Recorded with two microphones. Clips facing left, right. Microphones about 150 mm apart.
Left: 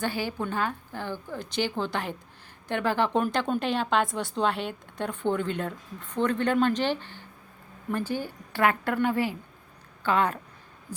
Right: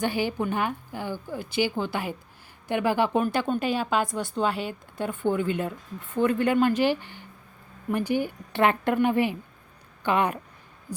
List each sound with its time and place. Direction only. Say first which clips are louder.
0.0 s a woman's voice: right 4 dB; 15° right (ahead or behind)